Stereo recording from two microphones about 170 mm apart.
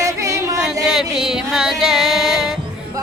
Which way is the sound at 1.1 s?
5° right (ahead or behind).